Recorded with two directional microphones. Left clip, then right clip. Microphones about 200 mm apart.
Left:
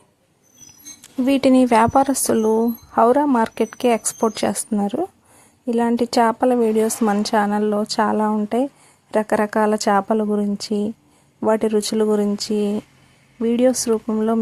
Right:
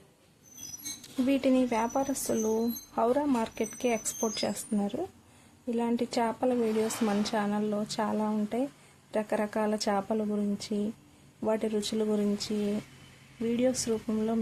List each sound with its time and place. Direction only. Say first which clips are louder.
1.3 s speech: left 12 dB; 40° left (ahead or behind)